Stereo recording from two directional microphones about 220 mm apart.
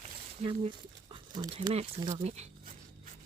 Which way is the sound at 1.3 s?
20° right (ahead or behind).